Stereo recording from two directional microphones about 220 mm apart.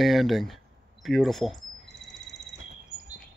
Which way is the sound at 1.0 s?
Centre (ahead or behind).